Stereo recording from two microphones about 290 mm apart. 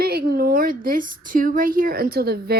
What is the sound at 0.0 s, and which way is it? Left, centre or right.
A woman's voice, right.